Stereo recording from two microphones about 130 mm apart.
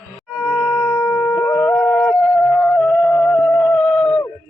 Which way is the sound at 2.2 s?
Centre (ahead or behind).